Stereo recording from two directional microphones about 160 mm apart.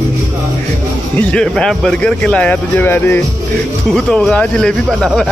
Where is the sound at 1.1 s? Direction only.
5° left (ahead or behind).